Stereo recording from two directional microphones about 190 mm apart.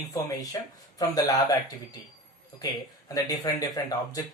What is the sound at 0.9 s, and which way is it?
Speech, 20° left (ahead or behind).